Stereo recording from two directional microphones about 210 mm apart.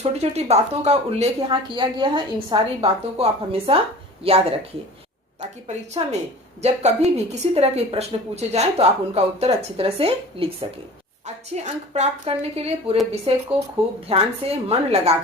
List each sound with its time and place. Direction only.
0.0 s a woman's voice: 30° right (ahead or behind)